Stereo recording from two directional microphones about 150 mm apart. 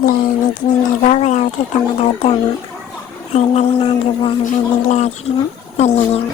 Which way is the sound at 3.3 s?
40° left (ahead or behind).